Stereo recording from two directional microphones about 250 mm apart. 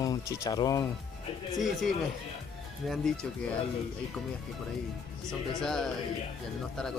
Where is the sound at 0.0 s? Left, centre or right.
Centre.